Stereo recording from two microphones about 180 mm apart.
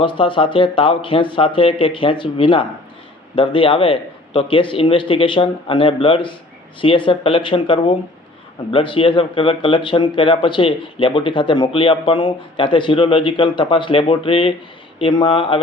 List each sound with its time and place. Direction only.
0.0 s speech: 30° left (ahead or behind)